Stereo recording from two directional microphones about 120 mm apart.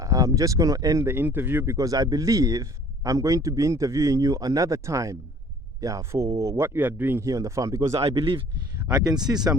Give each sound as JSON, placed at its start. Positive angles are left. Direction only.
{"t": 0.0, "sound": "speech", "side_deg": -30}
{"t": 1.0, "sound": "speech", "side_deg": -15}
{"t": 8.0, "sound": "speech", "side_deg": -50}
{"t": 8.9, "sound": "speech", "side_deg": -35}